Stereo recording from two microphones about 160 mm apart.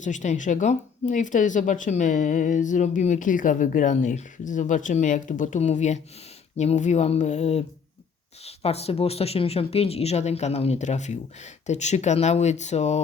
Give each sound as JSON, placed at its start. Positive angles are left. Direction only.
{"t": 0.0, "sound": "speech", "side_deg": 50}